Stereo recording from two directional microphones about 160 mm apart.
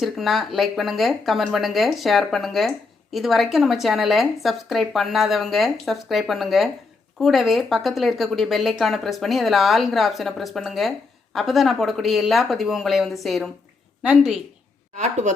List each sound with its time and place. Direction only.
0.0 s speech: centre (ahead or behind)
14.9 s a woman's voice: 45° right (ahead or behind)